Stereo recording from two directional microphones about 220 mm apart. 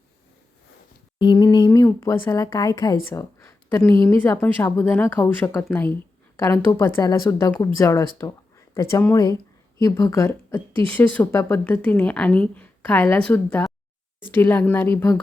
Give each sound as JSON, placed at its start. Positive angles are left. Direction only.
{"t": 1.2, "sound": "a woman's voice", "side_deg": 20}